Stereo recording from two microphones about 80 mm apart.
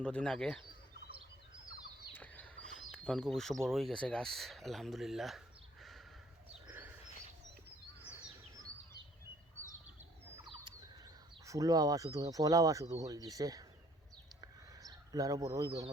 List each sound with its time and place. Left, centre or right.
0.0 s speech: centre
2.1 s speech: centre
6.7 s bird: right
11.4 s speech: right
14.4 s a sound: right